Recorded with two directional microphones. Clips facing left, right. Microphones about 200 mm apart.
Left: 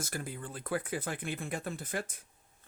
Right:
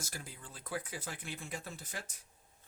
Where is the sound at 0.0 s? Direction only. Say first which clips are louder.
Left 9 dB; 55° left (ahead or behind).